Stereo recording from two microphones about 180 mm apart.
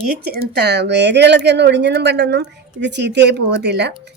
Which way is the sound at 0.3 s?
65° right (ahead or behind).